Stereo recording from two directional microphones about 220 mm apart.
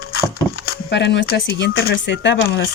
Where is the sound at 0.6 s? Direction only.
50° left (ahead or behind).